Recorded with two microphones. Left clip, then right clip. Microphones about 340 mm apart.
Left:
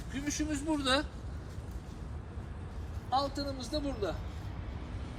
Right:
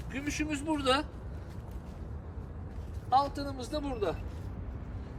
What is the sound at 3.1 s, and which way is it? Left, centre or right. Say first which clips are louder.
Speech: right 4 dB; centre.